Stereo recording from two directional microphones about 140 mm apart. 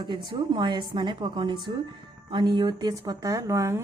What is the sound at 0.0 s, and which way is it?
A woman's voice, 35° right (ahead or behind).